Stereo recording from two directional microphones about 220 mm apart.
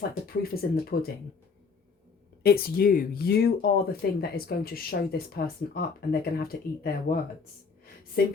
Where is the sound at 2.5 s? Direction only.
45° left (ahead or behind).